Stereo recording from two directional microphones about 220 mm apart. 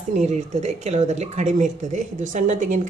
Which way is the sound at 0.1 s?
30° right (ahead or behind).